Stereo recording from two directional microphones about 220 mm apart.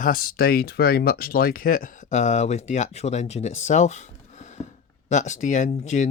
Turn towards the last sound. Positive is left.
turn(degrees=35)  # may be behind; listen again after turning